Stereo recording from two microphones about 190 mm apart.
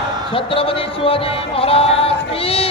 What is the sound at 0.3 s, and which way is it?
Music, 30° left (ahead or behind).